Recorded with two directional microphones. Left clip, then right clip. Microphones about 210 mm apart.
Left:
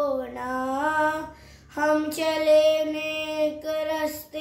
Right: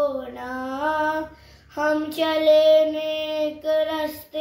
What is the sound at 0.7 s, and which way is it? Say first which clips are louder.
Child singing: right 1 dB; 20° left (ahead or behind).